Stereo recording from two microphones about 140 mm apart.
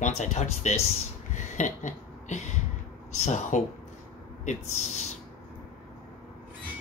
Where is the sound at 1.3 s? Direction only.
60° left (ahead or behind).